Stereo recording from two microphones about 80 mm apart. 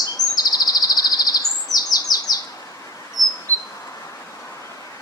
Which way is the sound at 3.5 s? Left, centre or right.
Left.